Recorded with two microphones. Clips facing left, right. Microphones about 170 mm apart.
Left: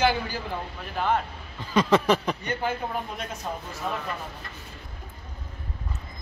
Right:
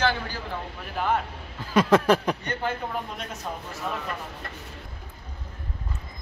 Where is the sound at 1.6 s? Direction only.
5° right (ahead or behind).